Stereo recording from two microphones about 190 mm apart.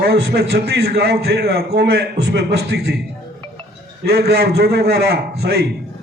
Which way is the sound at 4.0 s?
60° right (ahead or behind).